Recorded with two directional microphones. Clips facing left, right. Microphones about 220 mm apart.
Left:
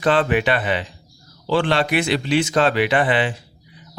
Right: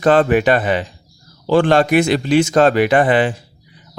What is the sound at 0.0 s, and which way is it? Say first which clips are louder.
Speech: right 5 dB; 45° right (ahead or behind).